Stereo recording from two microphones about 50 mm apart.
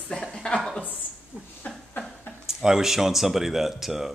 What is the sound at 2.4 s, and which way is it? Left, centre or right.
Speech, centre.